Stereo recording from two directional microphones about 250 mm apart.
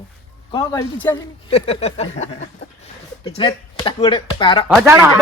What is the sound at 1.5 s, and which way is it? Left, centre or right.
Speech, left.